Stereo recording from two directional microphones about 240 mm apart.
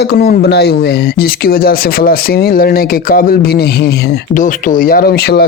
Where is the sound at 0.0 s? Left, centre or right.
Left.